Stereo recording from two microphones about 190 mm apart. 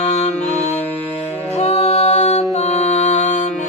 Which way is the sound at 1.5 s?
35° left (ahead or behind).